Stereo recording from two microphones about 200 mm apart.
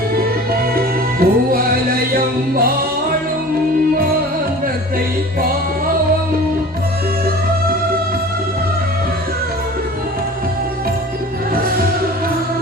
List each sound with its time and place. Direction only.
0.8 s music: 45° right (ahead or behind)